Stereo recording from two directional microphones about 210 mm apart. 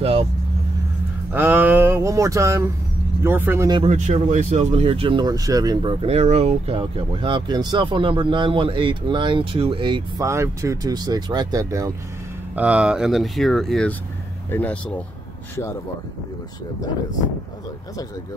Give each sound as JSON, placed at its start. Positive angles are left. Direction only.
{"t": 0.0, "sound": "vehicle", "side_deg": -30}
{"t": 1.3, "sound": "a sound", "side_deg": -10}
{"t": 3.3, "sound": "speech", "side_deg": -10}
{"t": 3.8, "sound": "speech", "side_deg": -30}